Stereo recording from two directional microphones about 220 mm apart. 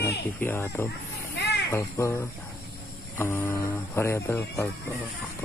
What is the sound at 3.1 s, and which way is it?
Speech, 10° left (ahead or behind).